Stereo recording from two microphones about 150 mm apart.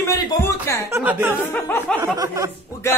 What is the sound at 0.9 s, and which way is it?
Speech, 15° right (ahead or behind).